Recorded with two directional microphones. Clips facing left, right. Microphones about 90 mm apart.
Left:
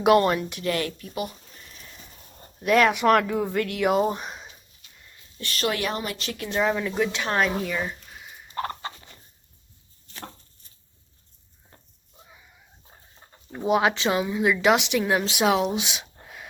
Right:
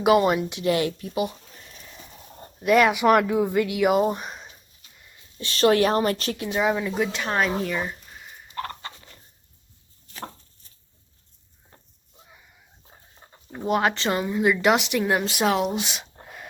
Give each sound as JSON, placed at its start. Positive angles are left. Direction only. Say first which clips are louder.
{"t": 0.0, "sound": "speech", "louder": "even", "side_deg": -5}
{"t": 2.6, "sound": "speech", "louder": "right 1 dB", "side_deg": -5}
{"t": 5.5, "sound": "a woman's voice", "louder": "right 8 dB", "side_deg": -35}
{"t": 6.5, "sound": "speech", "louder": "even", "side_deg": -5}
{"t": 8.5, "sound": "fowl", "louder": "left 3 dB", "side_deg": 20}
{"t": 13.5, "sound": "speech", "louder": "left 1 dB", "side_deg": 0}
{"t": 16.2, "sound": "a sound", "louder": "right 1 dB", "side_deg": 0}